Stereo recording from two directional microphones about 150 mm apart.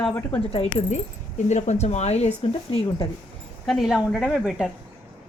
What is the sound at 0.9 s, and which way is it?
Speech, 50° left (ahead or behind).